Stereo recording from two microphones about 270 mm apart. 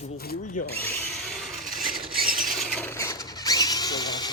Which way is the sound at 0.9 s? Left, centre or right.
Centre.